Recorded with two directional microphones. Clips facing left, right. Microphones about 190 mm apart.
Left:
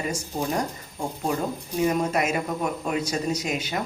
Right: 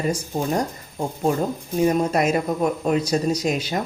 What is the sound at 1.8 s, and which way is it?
A woman's voice, 35° right (ahead or behind).